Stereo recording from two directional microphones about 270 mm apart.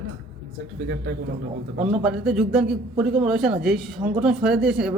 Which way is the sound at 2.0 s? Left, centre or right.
Centre.